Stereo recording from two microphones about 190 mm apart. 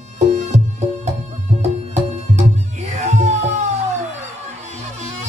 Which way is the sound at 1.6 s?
35° right (ahead or behind).